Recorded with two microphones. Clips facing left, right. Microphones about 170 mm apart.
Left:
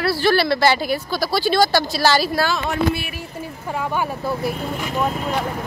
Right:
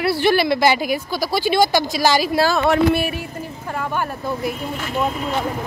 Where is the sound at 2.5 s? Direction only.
60° right (ahead or behind).